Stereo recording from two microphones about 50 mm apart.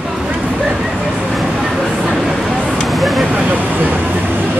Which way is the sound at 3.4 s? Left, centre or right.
Right.